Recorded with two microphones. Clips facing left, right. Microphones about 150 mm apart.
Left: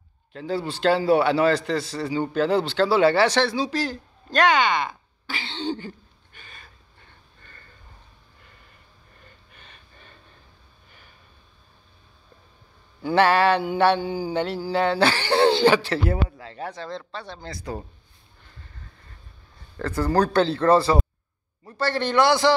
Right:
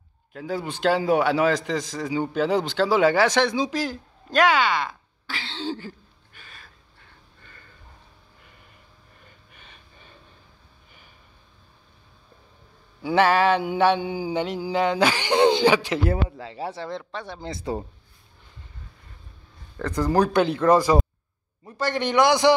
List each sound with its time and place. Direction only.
0.3 s a man's voice: 10° right (ahead or behind)
9.5 s a sound: 10° right (ahead or behind)
13.0 s mantra: 10° right (ahead or behind)
16.3 s speech: 25° right (ahead or behind)
19.8 s mantra: 15° right (ahead or behind)